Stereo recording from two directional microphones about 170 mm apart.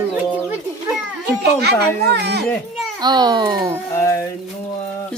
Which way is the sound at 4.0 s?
15° left (ahead or behind).